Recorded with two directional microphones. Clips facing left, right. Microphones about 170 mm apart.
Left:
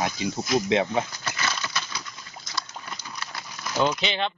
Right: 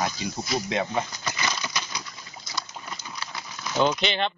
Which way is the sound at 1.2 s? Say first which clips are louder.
Even; 15° right (ahead or behind).